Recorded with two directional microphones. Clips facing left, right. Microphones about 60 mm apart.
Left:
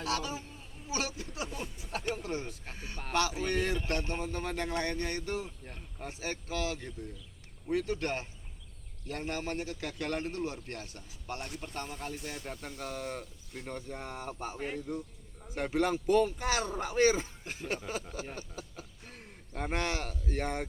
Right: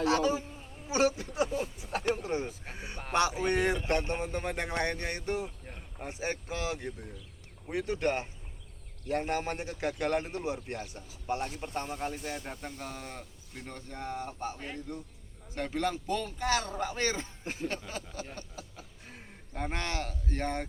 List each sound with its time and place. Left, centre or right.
0.0 s speech: right
1.5 s speech: centre
2.1 s speech: right
12.6 s a man's voice: centre
18.5 s a sound: centre
19.6 s speech: centre